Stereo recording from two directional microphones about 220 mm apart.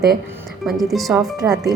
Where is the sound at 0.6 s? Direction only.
Centre (ahead or behind).